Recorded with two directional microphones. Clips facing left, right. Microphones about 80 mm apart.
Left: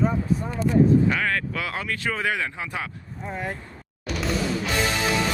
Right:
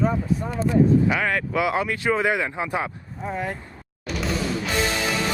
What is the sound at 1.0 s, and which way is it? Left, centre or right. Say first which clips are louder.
Speech: right 1 dB; centre.